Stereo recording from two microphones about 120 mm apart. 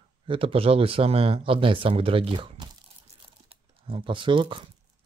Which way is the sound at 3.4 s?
45° right (ahead or behind).